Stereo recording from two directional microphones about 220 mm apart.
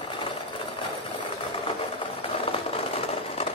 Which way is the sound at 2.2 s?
25° left (ahead or behind).